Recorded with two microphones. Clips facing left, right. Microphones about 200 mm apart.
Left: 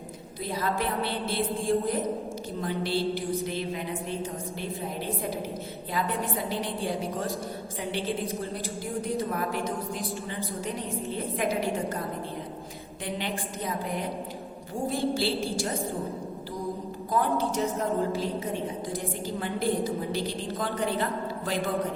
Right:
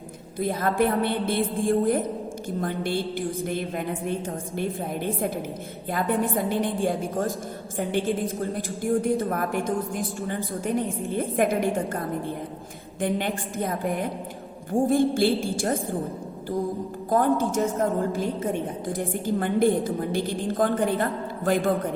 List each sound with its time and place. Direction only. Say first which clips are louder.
0.3 s a woman's voice: right 6 dB; 50° right (ahead or behind)
5.9 s a woman's voice: right 6 dB; 50° right (ahead or behind)
17.1 s a woman's voice: right 5 dB; 50° right (ahead or behind)